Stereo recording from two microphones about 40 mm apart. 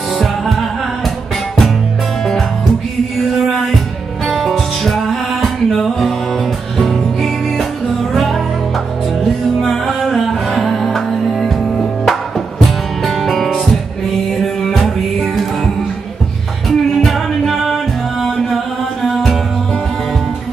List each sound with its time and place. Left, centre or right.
0.2 s music: centre
4.3 s music: centre
16.6 s music: centre